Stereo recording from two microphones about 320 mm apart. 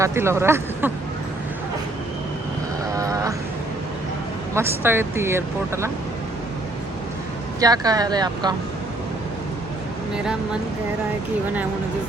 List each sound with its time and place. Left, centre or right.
0.0 s speech: centre
2.9 s sheep: centre
4.5 s speech: centre
7.6 s speech: centre